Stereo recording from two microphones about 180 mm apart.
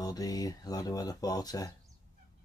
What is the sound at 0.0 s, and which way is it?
Speech, 20° left (ahead or behind).